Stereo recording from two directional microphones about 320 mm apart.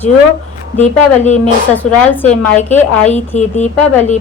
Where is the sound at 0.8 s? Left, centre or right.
Left.